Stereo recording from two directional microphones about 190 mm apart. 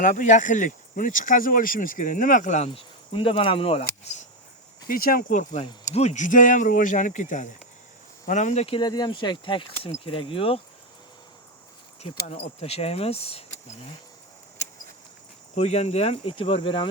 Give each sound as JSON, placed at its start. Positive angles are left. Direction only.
{"t": 0.0, "sound": "speech", "side_deg": 45}
{"t": 2.6, "sound": "speech", "side_deg": 25}
{"t": 4.9, "sound": "speech", "side_deg": 50}
{"t": 12.1, "sound": "speech", "side_deg": 40}
{"t": 15.5, "sound": "speech", "side_deg": 35}